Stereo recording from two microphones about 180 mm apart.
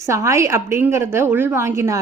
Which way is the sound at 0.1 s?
15° right (ahead or behind).